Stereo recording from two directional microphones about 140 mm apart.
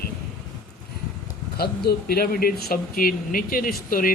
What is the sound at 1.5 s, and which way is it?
Speech, 90° left.